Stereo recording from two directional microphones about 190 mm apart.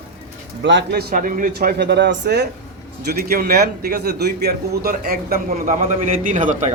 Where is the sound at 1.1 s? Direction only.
45° right (ahead or behind).